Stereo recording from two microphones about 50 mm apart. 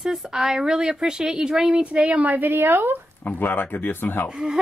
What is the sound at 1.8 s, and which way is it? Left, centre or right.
A woman's voice, right.